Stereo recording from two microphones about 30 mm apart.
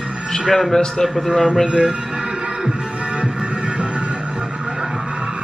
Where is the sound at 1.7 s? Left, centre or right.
Right.